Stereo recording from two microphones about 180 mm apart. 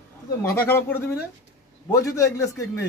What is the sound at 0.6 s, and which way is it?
A child's voice, 15° left (ahead or behind).